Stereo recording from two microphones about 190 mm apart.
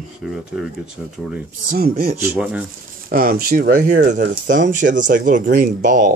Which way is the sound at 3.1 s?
50° right (ahead or behind).